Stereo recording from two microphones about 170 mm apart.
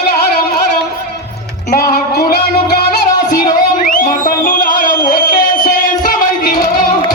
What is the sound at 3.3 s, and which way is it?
Music, 55° left (ahead or behind).